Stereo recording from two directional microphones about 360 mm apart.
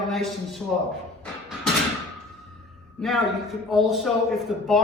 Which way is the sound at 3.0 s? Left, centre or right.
Centre.